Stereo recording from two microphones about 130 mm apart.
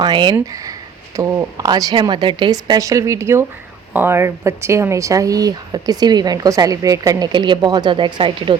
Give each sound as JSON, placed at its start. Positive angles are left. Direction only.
{"t": 0.0, "sound": "speech", "side_deg": -35}